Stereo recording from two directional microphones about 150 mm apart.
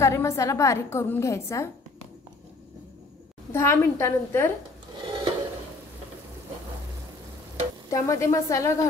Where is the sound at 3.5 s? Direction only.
15° left (ahead or behind).